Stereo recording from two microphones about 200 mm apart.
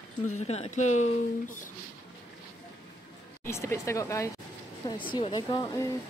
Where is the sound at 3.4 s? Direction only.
15° left (ahead or behind).